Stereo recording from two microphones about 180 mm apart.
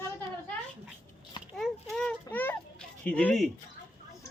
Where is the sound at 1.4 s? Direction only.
30° left (ahead or behind).